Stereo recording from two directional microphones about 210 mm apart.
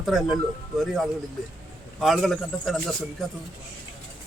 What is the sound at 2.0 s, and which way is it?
A man's voice, centre (ahead or behind).